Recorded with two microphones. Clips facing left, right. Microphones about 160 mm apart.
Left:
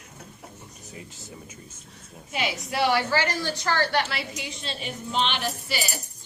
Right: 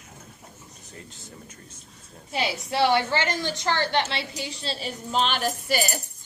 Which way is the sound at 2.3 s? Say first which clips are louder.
Right 2 dB; 30° right (ahead or behind).